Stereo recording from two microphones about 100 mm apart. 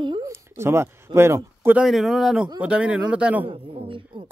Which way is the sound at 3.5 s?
60° right (ahead or behind).